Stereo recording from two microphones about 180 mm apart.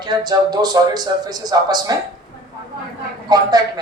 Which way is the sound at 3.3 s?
20° right (ahead or behind).